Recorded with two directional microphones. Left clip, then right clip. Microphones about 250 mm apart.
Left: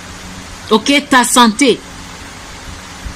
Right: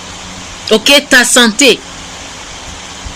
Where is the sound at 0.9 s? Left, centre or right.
Centre.